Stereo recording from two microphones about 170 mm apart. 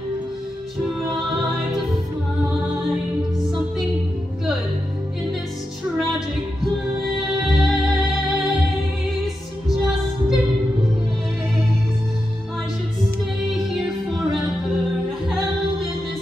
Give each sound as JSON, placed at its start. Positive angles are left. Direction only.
{"t": 7.2, "sound": "music", "side_deg": 0}
{"t": 9.7, "sound": "music", "side_deg": 0}